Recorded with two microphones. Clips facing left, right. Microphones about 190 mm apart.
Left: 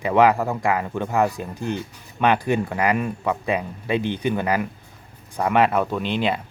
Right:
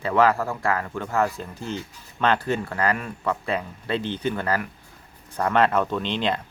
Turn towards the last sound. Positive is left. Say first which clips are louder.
# left 2 dB
turn(degrees=10)  # may be behind; listen again after turning